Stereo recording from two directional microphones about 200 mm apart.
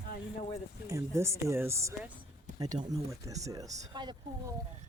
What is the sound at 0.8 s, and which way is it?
Speech, 15° right (ahead or behind).